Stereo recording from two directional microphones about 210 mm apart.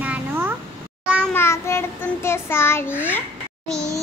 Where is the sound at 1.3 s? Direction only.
10° left (ahead or behind).